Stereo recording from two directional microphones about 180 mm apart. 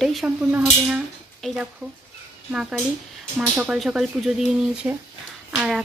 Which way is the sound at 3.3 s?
5° right (ahead or behind).